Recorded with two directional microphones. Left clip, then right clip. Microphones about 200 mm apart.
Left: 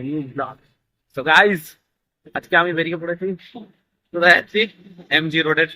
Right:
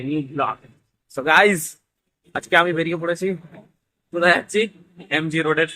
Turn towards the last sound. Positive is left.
turn(degrees=-5)  # may be behind; listen again after turning